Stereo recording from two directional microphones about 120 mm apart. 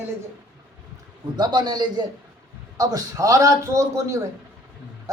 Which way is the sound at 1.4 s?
35° right (ahead or behind).